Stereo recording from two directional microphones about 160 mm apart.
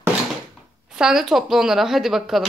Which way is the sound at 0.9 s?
5° right (ahead or behind).